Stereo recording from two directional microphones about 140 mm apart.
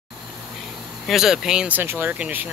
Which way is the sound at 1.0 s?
5° right (ahead or behind).